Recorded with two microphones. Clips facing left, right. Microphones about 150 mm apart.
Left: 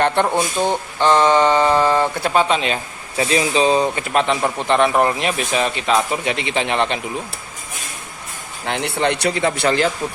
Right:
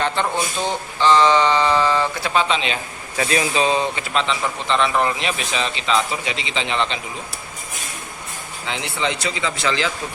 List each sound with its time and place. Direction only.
0.3 s speech: 15° left (ahead or behind)
1.0 s a man's voice: 50° left (ahead or behind)
3.2 s speech: 25° left (ahead or behind)
4.1 s a man's voice: 50° left (ahead or behind)
8.6 s speech: 60° left (ahead or behind)